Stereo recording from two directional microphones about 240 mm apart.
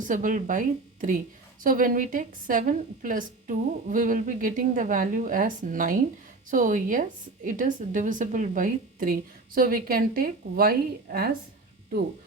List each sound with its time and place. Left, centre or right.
0.0 s a woman's voice: right
1.6 s a woman's voice: right